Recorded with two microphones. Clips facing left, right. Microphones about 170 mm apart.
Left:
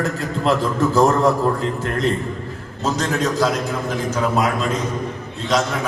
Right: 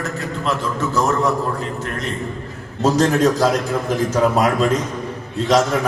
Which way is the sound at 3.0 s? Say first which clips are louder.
Right 3 dB; 35° right (ahead or behind).